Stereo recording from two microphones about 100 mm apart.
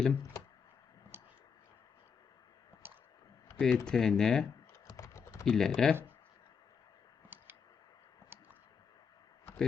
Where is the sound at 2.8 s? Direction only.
20° right (ahead or behind).